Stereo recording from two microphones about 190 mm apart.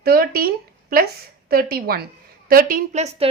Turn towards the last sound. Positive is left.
turn(degrees=-35)  # may be behind; listen again after turning